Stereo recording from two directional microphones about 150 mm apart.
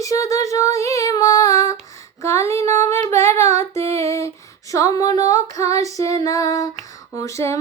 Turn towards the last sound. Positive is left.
turn(degrees=20)  # may be behind; listen again after turning